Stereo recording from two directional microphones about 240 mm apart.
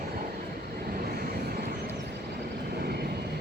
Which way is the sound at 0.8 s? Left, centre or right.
Right.